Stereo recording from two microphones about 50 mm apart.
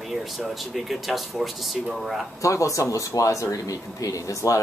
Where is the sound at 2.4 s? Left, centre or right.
Left.